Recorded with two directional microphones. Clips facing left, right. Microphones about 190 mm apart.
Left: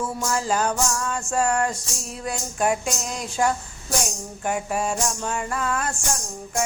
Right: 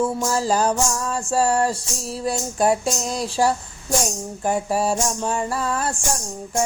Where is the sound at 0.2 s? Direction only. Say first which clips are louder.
Right 3 dB; 35° right (ahead or behind).